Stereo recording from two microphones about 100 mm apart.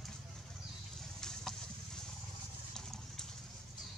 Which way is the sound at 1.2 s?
5° left (ahead or behind).